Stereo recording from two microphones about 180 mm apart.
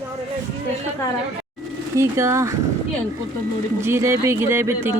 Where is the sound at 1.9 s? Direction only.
15° right (ahead or behind).